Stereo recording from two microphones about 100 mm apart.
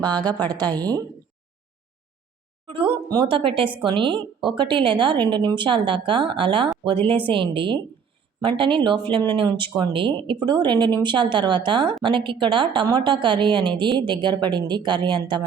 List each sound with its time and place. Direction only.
0.0 s speech: 45° right (ahead or behind)
2.6 s a woman's voice: 60° right (ahead or behind)